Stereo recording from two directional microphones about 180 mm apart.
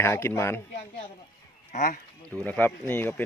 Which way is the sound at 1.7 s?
45° left (ahead or behind).